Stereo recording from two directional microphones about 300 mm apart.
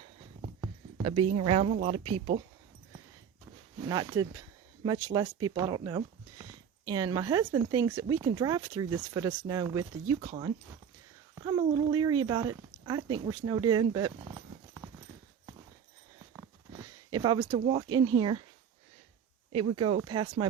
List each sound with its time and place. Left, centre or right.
0.6 s a sound: centre
1.4 s speech: centre
3.8 s speech: centre
16.3 s a sound: centre
17.6 s speech: centre
19.5 s speech: centre